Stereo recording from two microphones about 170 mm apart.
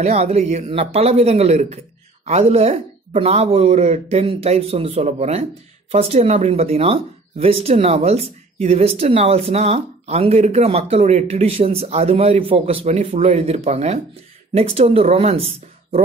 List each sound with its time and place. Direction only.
0.0 s speech: 40° right (ahead or behind)